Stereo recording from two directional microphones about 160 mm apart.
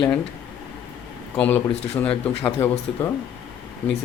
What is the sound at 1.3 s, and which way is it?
Speech, 10° left (ahead or behind).